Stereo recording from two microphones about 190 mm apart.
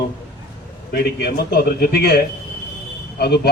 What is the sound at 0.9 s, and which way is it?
A man's voice, 55° left (ahead or behind).